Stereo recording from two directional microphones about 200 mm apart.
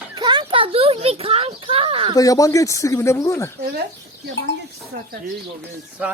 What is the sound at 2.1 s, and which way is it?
Speech, 15° left (ahead or behind).